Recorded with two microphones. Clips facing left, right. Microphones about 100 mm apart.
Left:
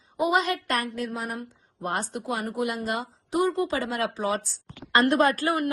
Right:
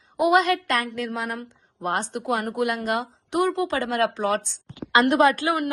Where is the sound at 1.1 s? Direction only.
90° right.